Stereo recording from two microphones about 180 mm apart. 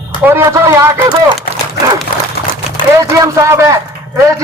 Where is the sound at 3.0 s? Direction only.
15° right (ahead or behind).